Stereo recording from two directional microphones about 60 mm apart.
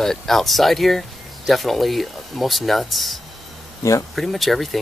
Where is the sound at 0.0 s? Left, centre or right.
Centre.